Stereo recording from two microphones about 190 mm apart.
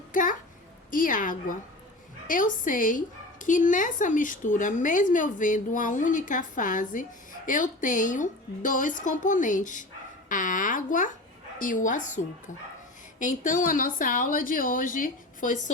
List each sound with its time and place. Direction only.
0.1 s a child's voice: 45° left (ahead or behind)